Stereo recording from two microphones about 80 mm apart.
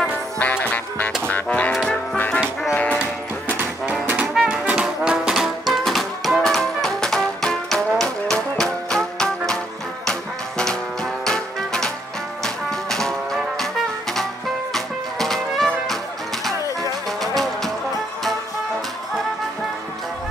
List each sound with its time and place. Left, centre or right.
0.4 s music: centre
3.4 s music: centre
4.3 s music: centre
11.2 s music: centre
17.2 s music: centre